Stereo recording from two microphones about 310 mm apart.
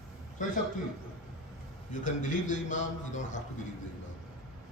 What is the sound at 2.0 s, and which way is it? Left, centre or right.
A man's voice, left.